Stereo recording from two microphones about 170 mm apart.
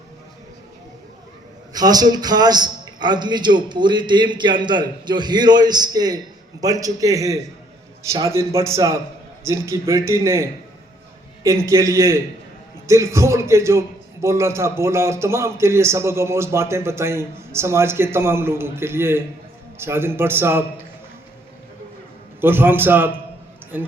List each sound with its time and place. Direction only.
1.7 s a man's voice: 20° right (ahead or behind)
22.4 s a man's voice: 10° right (ahead or behind)